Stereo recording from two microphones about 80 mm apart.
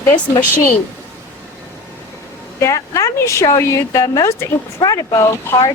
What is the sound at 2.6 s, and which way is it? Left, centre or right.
Speech, left.